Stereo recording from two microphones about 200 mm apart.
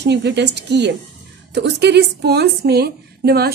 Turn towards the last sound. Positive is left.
turn(degrees=-50)  # may be behind; listen again after turning